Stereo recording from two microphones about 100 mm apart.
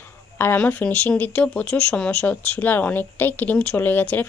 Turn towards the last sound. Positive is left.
turn(degrees=15)  # may be behind; listen again after turning